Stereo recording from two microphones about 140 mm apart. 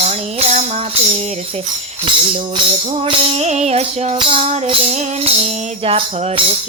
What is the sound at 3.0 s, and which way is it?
Music, 50° right (ahead or behind).